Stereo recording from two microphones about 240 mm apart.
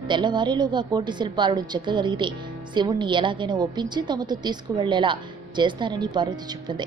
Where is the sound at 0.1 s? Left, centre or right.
Centre.